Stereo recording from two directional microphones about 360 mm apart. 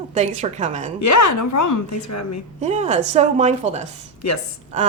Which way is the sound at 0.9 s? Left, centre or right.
Left.